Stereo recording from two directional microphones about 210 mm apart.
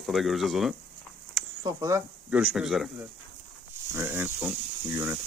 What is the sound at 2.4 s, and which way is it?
Speech, centre (ahead or behind).